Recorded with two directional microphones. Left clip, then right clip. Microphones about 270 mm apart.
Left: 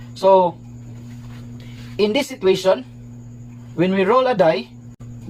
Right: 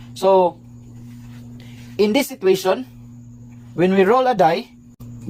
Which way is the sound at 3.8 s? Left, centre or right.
Right.